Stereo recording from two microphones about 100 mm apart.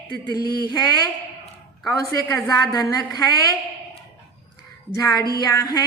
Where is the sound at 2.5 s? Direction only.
40° left (ahead or behind).